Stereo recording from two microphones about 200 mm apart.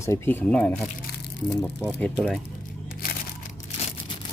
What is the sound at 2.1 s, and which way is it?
Speech, centre (ahead or behind).